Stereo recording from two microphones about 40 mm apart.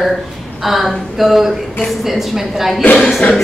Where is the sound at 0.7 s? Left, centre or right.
Centre.